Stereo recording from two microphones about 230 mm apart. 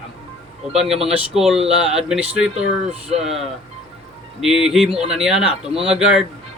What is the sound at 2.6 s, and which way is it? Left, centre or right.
Speech, right.